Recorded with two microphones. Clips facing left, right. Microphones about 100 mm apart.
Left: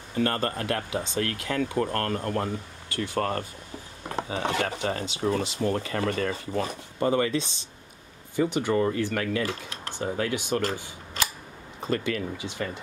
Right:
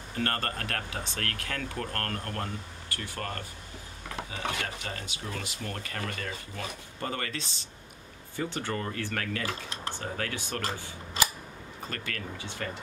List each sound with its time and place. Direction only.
0.2 s speech: 15° left (ahead or behind)
3.2 s speech: 35° left (ahead or behind)
7.0 s speech: 20° left (ahead or behind)
11.8 s speech: 20° left (ahead or behind)